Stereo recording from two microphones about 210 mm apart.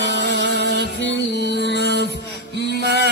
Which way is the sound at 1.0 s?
55° left (ahead or behind).